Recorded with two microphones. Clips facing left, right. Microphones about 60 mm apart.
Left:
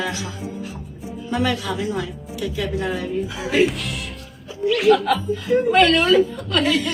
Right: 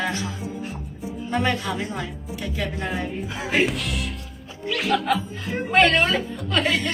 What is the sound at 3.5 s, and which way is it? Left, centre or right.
Speech, centre.